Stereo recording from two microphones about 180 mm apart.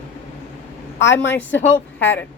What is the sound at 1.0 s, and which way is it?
Speech, 90° left.